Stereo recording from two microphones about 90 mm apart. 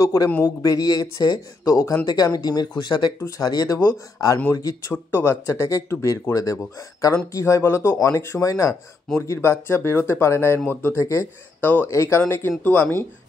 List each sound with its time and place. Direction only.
0.0 s speech: 35° left (ahead or behind); by 3.1 s 55° left (ahead or behind)
3.2 s speech: 35° left (ahead or behind)
4.9 s speech: 25° left (ahead or behind)
11.6 s speech: 20° left (ahead or behind)